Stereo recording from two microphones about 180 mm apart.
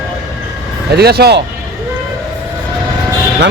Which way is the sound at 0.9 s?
65° right (ahead or behind).